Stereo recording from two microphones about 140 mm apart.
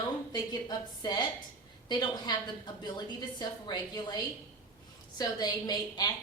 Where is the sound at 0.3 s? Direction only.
30° left (ahead or behind).